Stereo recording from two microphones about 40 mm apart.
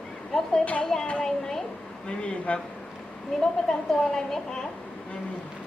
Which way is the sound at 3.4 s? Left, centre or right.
Centre.